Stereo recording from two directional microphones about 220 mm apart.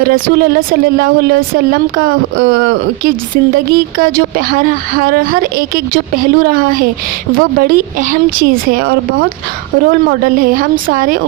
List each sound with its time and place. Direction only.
0.0 s speech: 40° right (ahead or behind)